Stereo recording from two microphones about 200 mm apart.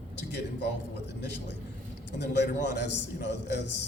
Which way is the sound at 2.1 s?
60° left (ahead or behind).